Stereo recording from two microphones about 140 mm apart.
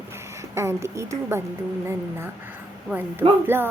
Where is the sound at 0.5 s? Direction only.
20° right (ahead or behind).